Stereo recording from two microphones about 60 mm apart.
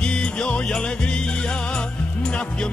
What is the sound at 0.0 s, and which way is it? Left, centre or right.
Music, centre.